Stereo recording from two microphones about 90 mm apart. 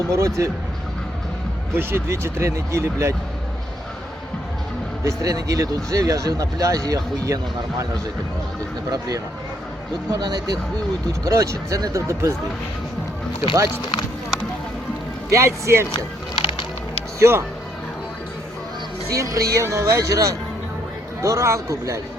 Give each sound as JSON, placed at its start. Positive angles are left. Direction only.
{"t": 0.1, "sound": "speech", "side_deg": -35}
{"t": 1.7, "sound": "speech", "side_deg": -25}
{"t": 5.0, "sound": "speech", "side_deg": -40}
{"t": 8.9, "sound": "speech", "side_deg": -40}
{"t": 11.3, "sound": "speech", "side_deg": -35}
{"t": 15.3, "sound": "speech", "side_deg": -35}
{"t": 16.3, "sound": "music", "side_deg": 90}
{"t": 17.2, "sound": "speech", "side_deg": -30}
{"t": 19.1, "sound": "speech", "side_deg": -35}